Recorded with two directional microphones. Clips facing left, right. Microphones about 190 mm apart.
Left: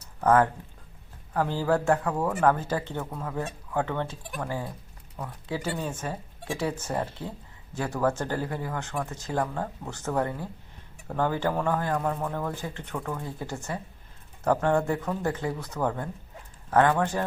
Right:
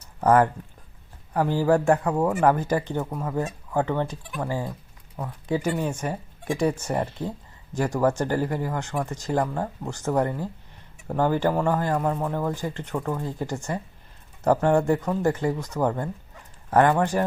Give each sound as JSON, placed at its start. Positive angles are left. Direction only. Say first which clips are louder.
{"t": 0.2, "sound": "speech", "louder": "right 3 dB", "side_deg": -15}